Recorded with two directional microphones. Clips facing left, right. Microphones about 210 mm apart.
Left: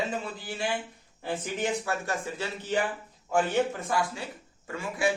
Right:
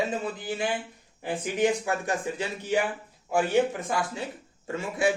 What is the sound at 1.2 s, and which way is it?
Speech, 15° right (ahead or behind).